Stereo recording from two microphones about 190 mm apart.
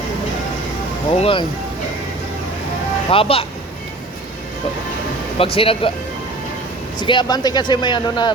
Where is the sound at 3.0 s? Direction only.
30° left (ahead or behind).